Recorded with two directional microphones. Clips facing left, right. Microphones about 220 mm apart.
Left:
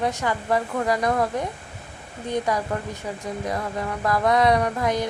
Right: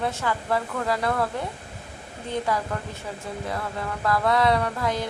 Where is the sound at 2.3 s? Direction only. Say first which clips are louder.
Left 2 dB; 15° left (ahead or behind).